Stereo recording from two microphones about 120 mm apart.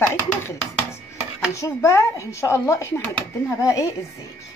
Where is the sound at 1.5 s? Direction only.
25° left (ahead or behind).